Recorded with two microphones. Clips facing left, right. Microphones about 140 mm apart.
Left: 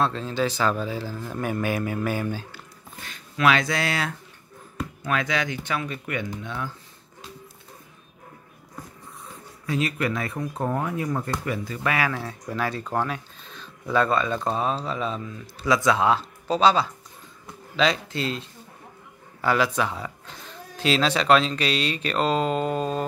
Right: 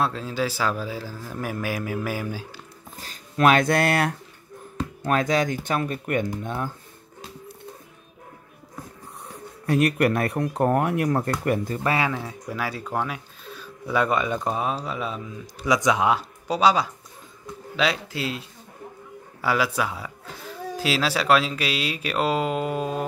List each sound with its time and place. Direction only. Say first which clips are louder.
0.0 s a man's voice: left 1 dB; 5° right (ahead or behind)
3.0 s speech: right 4 dB; 40° right (ahead or behind); by 4.1 s 55° right (ahead or behind)
5.0 s speech: right 4 dB; 40° right (ahead or behind)
9.2 s speech: right 5 dB; 60° right (ahead or behind)
11.8 s speech: left 2 dB; 30° right (ahead or behind)
12.1 s speech: even; 10° right (ahead or behind)